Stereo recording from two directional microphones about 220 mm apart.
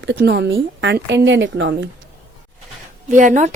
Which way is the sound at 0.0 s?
50° right (ahead or behind).